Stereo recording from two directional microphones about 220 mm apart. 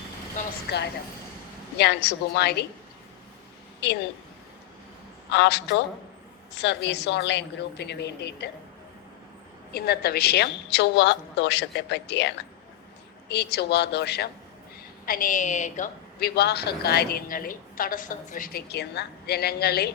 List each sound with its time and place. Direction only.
0.4 s vehicle: 35° left (ahead or behind)
1.8 s a woman's voice: 50° left (ahead or behind)
5.3 s a woman's voice: 50° left (ahead or behind)
9.7 s a woman's voice: 45° left (ahead or behind)
16.3 s a woman's voice: 50° left (ahead or behind)